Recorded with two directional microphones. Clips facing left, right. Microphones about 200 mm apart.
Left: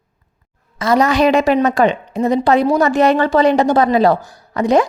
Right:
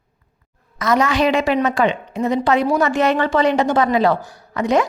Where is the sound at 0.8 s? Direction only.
35° left (ahead or behind).